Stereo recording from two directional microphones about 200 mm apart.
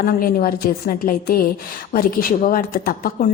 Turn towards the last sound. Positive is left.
turn(degrees=45)  # may be behind; listen again after turning